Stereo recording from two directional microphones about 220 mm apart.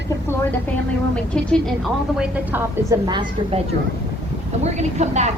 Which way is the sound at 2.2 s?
10° right (ahead or behind).